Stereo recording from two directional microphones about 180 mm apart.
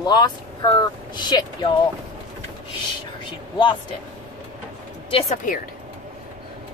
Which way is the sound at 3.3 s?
25° left (ahead or behind).